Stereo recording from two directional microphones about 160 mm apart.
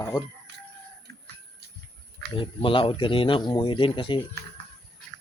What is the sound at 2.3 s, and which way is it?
Speech, 35° left (ahead or behind).